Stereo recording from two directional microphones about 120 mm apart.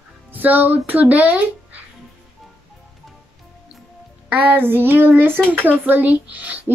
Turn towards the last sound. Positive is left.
turn(degrees=-10)  # may be behind; listen again after turning